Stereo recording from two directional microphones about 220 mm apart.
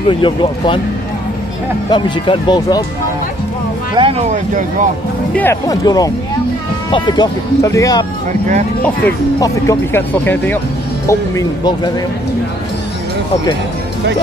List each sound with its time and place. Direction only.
0.2 s speech: 20° left (ahead or behind)
1.9 s speech: 20° left (ahead or behind)
4.0 s speech: 25° right (ahead or behind)
4.3 s speech: 35° right (ahead or behind)
5.3 s speech: 10° left (ahead or behind)